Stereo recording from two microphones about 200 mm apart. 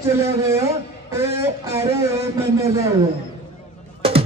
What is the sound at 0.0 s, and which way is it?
Speech, 15° right (ahead or behind).